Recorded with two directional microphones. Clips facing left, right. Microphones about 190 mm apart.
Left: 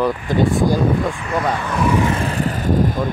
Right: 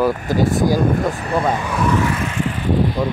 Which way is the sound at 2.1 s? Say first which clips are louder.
Left 2 dB; 35° left (ahead or behind).